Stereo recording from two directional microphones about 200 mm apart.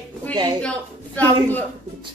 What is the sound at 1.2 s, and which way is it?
Speech, 10° left (ahead or behind).